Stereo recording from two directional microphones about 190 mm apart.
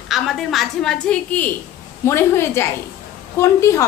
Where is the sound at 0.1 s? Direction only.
Centre (ahead or behind).